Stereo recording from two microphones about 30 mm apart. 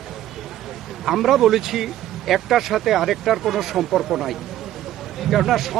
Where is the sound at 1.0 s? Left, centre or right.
Centre.